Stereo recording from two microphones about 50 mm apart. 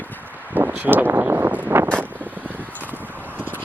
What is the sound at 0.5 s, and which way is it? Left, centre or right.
Vehicle, right.